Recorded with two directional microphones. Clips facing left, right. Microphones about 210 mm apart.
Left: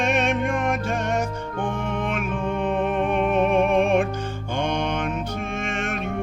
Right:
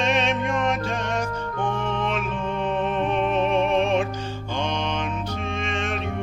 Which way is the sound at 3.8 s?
55° left (ahead or behind).